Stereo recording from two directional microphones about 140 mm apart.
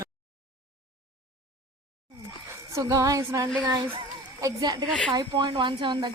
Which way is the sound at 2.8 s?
25° right (ahead or behind).